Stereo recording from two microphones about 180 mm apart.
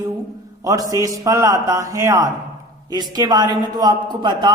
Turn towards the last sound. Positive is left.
turn(degrees=-25)  # may be behind; listen again after turning